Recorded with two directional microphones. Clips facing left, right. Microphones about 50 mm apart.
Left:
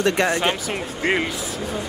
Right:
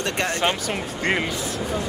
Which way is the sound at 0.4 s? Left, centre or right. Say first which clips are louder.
Even; centre.